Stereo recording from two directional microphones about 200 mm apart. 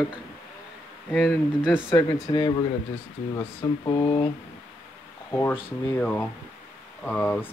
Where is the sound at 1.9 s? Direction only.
25° left (ahead or behind).